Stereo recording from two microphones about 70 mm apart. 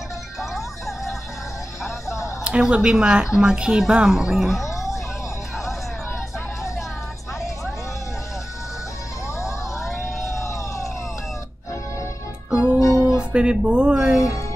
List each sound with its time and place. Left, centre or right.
0.6 s music: centre
1.8 s music: left
2.4 s a woman's voice: centre
4.6 s music: left
10.2 s a sound: left
12.4 s music: centre
13.0 s speech: centre